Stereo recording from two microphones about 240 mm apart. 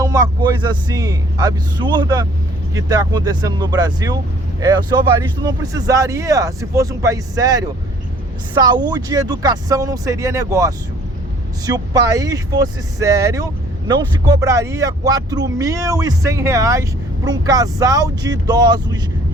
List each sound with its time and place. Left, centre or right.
0.0 s speech: centre